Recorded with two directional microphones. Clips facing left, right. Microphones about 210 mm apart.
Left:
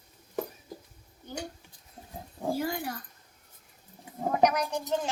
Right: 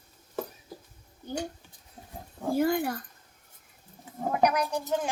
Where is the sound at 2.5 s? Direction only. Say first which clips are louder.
Right 7 dB; 55° right (ahead or behind).